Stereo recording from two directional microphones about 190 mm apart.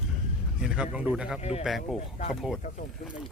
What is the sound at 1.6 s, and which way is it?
Speech, centre (ahead or behind).